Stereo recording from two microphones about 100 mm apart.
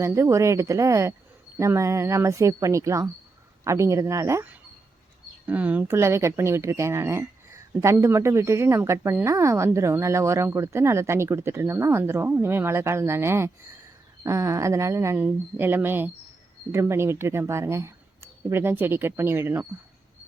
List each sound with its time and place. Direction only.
0.0 s speech: 30° right (ahead or behind)
5.5 s speech: 15° right (ahead or behind)
6.0 s speech: 25° right (ahead or behind)